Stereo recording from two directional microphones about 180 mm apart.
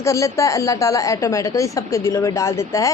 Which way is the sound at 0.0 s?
15° left (ahead or behind).